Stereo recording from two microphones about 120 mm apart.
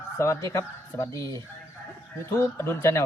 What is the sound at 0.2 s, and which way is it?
Speech, 25° left (ahead or behind).